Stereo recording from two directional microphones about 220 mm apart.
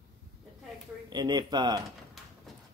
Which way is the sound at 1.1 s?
20° right (ahead or behind).